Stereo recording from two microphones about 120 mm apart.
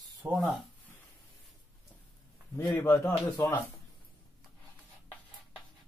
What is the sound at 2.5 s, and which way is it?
A man's voice, 20° left (ahead or behind).